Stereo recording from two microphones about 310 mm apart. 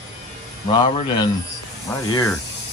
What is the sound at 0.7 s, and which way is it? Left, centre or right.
Speech, centre.